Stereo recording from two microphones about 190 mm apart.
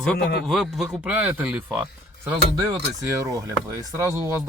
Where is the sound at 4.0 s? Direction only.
15° right (ahead or behind).